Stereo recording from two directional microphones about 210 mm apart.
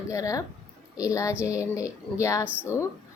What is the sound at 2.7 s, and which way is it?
Speech, 10° right (ahead or behind).